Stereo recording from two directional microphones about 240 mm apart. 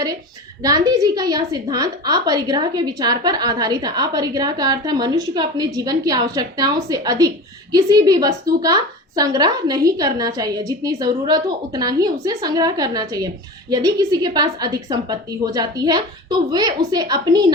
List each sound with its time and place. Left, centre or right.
0.6 s a woman's voice: centre